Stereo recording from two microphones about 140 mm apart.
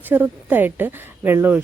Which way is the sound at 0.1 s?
15° right (ahead or behind).